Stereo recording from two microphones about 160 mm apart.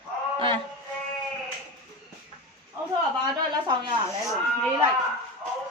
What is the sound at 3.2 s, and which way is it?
Speech, 25° right (ahead or behind).